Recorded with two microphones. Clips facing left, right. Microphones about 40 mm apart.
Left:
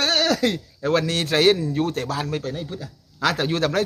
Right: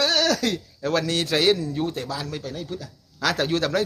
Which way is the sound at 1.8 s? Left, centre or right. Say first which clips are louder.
Left 3 dB; left.